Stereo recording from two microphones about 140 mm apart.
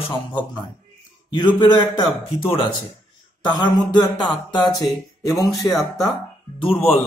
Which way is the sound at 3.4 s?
30° left (ahead or behind).